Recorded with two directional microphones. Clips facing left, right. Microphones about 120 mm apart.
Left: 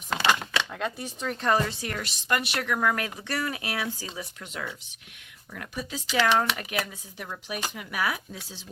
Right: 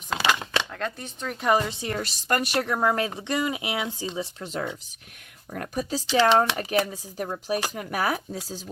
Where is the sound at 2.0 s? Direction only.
40° right (ahead or behind); by 3.9 s 20° right (ahead or behind).